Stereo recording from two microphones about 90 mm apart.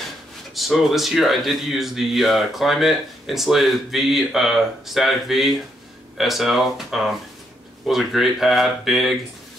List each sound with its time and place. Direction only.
0.6 s speech: centre (ahead or behind)